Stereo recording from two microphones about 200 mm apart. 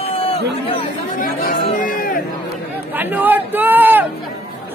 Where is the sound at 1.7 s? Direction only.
45° left (ahead or behind).